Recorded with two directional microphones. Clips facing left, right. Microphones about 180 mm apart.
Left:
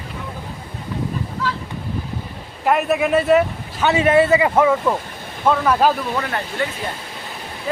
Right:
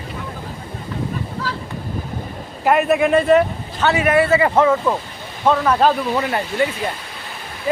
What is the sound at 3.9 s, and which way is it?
Speech, 25° left (ahead or behind).